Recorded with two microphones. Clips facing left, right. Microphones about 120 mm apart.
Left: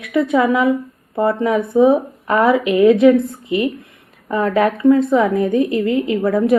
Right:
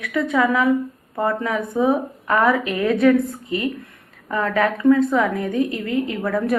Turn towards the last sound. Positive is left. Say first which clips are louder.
# left 5 dB
turn(degrees=20)  # may be behind; listen again after turning